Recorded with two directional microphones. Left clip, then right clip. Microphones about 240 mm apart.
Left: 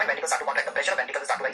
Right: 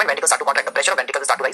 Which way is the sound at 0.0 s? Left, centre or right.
Right.